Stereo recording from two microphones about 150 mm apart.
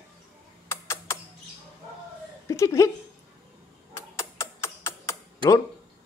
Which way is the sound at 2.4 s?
20° left (ahead or behind).